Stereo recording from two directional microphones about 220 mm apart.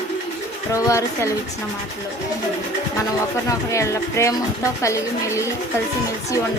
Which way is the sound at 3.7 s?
15° left (ahead or behind).